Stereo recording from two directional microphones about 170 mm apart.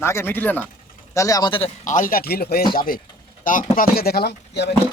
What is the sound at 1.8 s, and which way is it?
Speech, 50° left (ahead or behind).